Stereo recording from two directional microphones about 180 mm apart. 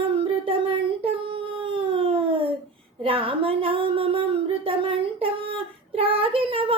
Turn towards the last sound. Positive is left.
turn(degrees=-30)  # may be behind; listen again after turning